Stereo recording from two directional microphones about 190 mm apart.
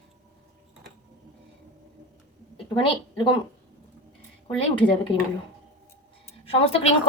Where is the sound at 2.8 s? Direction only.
25° left (ahead or behind).